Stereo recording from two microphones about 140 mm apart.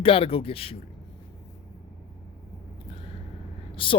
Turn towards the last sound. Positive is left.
turn(degrees=40)  # may be behind; listen again after turning